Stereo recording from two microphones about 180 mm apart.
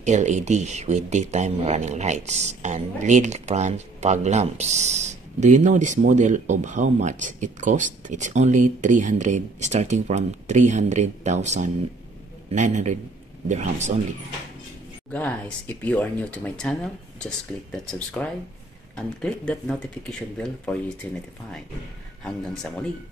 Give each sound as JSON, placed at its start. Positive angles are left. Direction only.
{"t": 0.0, "sound": "speech", "side_deg": -40}
{"t": 15.0, "sound": "speech", "side_deg": 5}
{"t": 22.2, "sound": "speech", "side_deg": 5}